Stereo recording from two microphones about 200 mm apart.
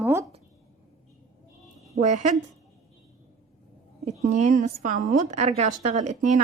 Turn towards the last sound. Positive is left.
turn(degrees=-35)  # may be behind; listen again after turning